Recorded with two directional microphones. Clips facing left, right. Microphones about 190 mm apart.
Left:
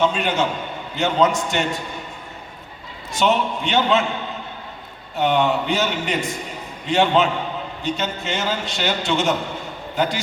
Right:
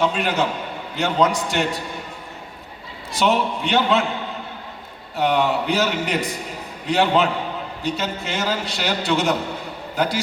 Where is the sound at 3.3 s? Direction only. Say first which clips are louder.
Even; centre (ahead or behind).